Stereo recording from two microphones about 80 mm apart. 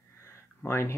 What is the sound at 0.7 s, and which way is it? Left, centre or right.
Speech, left.